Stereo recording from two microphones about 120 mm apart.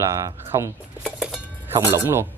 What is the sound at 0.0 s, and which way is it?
Speech, 25° right (ahead or behind).